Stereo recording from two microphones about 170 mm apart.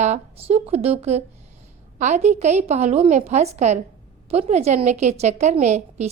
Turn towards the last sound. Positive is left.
turn(degrees=-40)  # may be behind; listen again after turning